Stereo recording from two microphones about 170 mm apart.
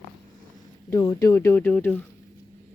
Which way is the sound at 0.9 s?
20° left (ahead or behind).